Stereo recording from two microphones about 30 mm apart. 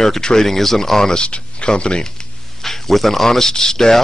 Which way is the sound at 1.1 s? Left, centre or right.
Left.